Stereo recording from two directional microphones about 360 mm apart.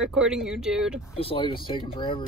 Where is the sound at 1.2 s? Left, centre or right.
Centre.